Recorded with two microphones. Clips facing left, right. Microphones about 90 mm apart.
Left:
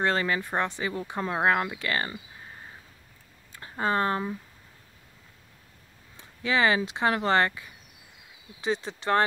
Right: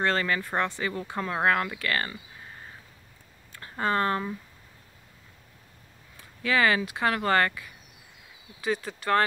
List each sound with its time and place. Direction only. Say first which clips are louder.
0.0 s speech: even; 15° left (ahead or behind)
3.5 s speech: even; 15° left (ahead or behind)
6.1 s speech: even; 20° left (ahead or behind)